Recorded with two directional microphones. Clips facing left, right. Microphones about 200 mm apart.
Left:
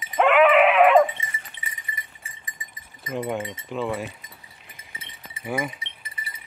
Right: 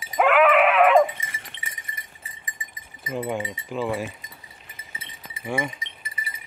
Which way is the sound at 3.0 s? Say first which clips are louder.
Even; centre (ahead or behind).